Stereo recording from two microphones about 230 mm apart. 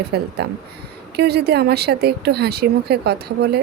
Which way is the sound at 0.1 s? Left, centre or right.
Right.